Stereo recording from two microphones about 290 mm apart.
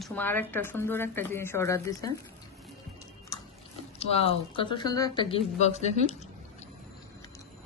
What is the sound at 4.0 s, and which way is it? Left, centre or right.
Speech, centre.